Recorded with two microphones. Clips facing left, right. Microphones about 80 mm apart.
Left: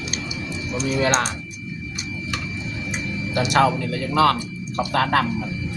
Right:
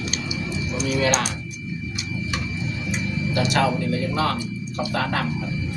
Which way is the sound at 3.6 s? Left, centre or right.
Left.